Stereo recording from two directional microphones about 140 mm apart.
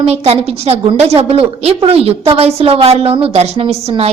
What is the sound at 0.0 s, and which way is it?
A woman's voice, 45° right (ahead or behind).